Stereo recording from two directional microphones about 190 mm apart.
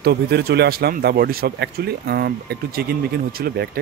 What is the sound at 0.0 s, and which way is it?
Speech, 55° right (ahead or behind).